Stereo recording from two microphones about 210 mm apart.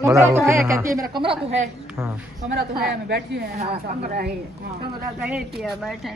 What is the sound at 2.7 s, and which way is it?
A woman's voice, 50° right (ahead or behind).